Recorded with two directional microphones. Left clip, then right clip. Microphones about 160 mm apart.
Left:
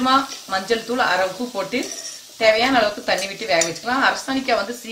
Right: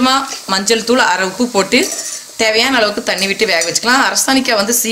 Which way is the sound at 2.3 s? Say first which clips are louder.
Right 3 dB; 65° right (ahead or behind).